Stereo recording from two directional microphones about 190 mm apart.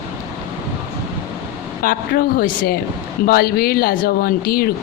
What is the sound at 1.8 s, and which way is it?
Speech, 50° left (ahead or behind).